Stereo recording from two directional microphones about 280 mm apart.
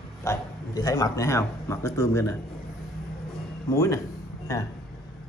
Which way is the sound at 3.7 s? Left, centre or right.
Centre.